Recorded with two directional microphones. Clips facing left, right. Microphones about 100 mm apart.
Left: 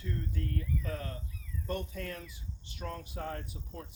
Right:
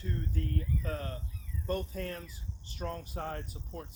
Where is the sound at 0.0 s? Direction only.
35° right (ahead or behind).